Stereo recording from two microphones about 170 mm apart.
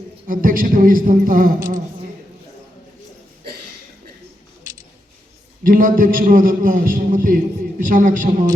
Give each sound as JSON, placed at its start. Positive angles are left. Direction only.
{"t": 0.3, "sound": "speech", "side_deg": -55}
{"t": 5.6, "sound": "a man's voice", "side_deg": -55}